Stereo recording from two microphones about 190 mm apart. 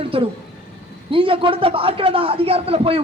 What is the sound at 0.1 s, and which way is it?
A man's voice, 30° right (ahead or behind).